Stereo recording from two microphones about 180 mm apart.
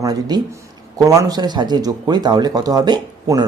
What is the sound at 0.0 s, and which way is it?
Speech, 20° right (ahead or behind).